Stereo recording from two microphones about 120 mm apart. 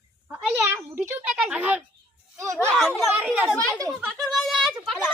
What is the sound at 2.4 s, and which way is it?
Speech, 20° right (ahead or behind).